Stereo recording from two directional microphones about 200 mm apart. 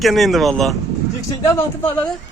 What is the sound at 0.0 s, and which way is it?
A man's voice, centre (ahead or behind).